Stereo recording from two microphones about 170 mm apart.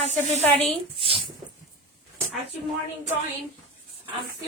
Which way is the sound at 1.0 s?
30° right (ahead or behind).